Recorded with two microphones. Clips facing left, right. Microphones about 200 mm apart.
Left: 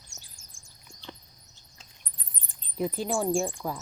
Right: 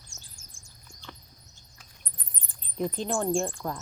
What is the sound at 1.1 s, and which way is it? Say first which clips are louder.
Rodents: left 3 dB; 20° left (ahead or behind).